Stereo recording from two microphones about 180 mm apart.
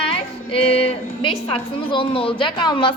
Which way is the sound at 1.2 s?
25° left (ahead or behind).